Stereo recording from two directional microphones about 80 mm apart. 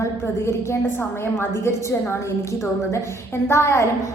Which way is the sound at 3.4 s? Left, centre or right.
Left.